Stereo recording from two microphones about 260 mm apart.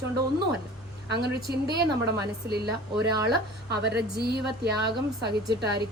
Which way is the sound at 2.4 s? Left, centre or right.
Right.